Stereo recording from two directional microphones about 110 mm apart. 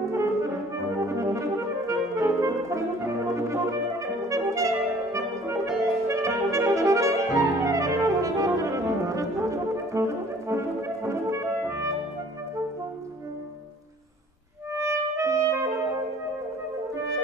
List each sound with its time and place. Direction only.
0.1 s brass instrument: 25° right (ahead or behind)
14.7 s music: 25° right (ahead or behind)
16.9 s music: 30° right (ahead or behind)